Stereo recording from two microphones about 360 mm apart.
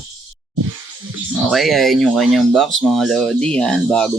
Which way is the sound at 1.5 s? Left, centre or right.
Centre.